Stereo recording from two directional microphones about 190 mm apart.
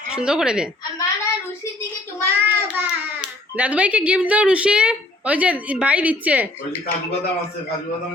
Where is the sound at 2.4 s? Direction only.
10° right (ahead or behind).